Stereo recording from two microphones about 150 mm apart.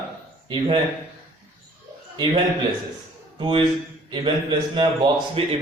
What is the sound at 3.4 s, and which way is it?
A man's voice, 35° right (ahead or behind).